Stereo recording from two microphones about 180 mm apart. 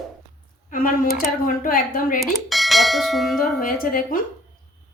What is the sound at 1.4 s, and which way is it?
Speech, 50° left (ahead or behind).